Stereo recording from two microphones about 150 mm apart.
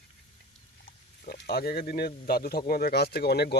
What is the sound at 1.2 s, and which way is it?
Speech, 90° left.